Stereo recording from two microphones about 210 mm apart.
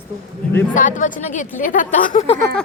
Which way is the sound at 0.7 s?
40° left (ahead or behind).